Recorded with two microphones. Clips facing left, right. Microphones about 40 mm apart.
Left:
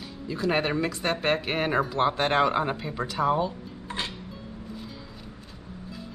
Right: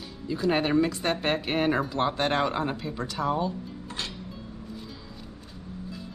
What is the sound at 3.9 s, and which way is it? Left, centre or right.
Music, left.